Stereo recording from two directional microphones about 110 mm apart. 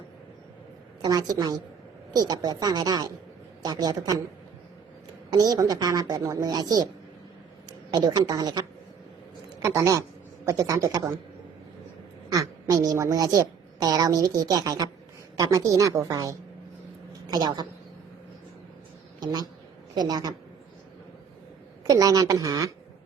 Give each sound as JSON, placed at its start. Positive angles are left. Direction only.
{"t": 1.0, "sound": "a woman's voice", "side_deg": -35}
{"t": 5.3, "sound": "a woman's voice", "side_deg": -35}
{"t": 7.9, "sound": "a woman's voice", "side_deg": -40}
{"t": 9.6, "sound": "a man's voice", "side_deg": -30}
{"t": 12.3, "sound": "a woman's voice", "side_deg": -30}
{"t": 17.1, "sound": "a sound", "side_deg": -35}
{"t": 19.2, "sound": "a woman's voice", "side_deg": -40}
{"t": 21.8, "sound": "a woman's voice", "side_deg": -30}